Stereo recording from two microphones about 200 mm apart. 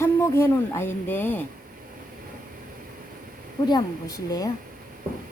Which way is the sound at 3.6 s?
20° left (ahead or behind).